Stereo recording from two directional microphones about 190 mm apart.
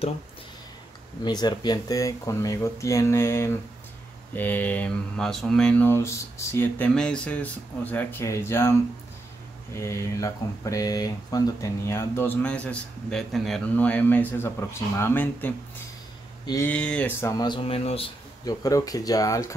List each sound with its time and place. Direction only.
1.2 s speech: 20° left (ahead or behind)
9.8 s speech: 15° left (ahead or behind)
17.4 s speech: 25° left (ahead or behind)
18.4 s speech: 20° left (ahead or behind)